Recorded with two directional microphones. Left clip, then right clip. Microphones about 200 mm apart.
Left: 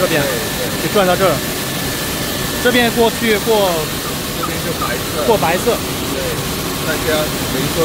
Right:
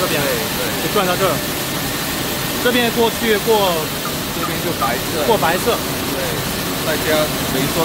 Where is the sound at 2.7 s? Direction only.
15° left (ahead or behind).